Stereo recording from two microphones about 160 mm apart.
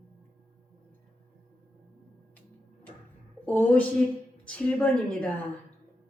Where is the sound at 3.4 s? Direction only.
10° left (ahead or behind).